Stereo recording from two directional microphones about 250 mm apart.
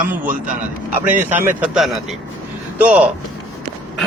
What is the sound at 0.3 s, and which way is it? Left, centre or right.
Speech, right.